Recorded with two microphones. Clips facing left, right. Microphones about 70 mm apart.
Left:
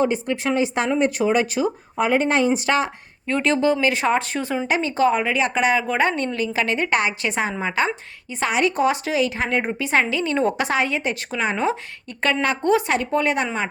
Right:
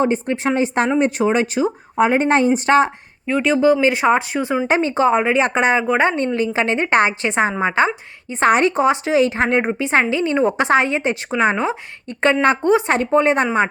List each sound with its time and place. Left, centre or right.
0.0 s speech: right
3.2 s speech: centre
3.8 s speech: right
4.7 s speech: right
8.3 s speech: right
8.7 s speech: right